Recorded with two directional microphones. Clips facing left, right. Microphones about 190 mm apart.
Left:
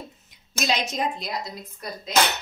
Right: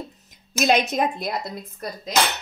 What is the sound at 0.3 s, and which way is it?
A woman's voice, 55° right (ahead or behind).